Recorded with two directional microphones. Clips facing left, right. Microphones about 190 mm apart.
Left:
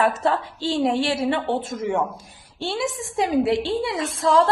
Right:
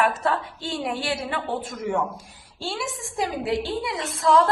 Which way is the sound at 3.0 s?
25° left (ahead or behind).